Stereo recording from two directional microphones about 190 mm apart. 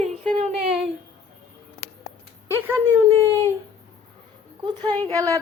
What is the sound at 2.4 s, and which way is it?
Speech, 15° right (ahead or behind).